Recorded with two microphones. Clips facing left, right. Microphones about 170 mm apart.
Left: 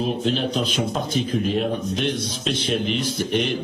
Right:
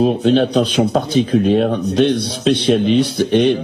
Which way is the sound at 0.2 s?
70° right (ahead or behind).